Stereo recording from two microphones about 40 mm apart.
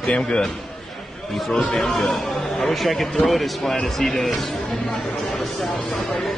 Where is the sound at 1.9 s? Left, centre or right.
Centre.